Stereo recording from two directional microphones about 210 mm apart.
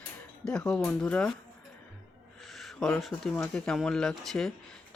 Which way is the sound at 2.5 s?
Centre (ahead or behind).